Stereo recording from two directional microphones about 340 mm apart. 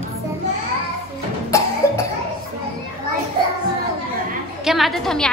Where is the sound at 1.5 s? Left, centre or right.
Centre.